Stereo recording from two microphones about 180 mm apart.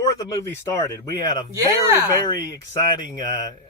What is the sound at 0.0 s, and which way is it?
Speech, 20° left (ahead or behind).